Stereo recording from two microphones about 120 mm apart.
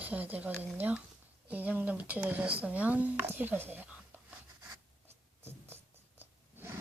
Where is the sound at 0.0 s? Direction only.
15° right (ahead or behind).